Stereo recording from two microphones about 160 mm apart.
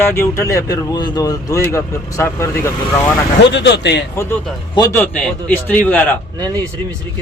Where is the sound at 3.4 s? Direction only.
90° left.